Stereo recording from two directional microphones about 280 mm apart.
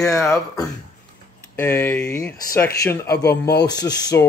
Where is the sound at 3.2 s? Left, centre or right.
Left.